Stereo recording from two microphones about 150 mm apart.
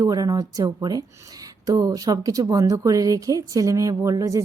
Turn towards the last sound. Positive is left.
turn(degrees=-20)  # may be behind; listen again after turning